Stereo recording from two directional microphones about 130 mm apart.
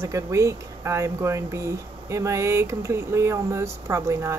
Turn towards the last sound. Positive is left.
turn(degrees=-20)  # may be behind; listen again after turning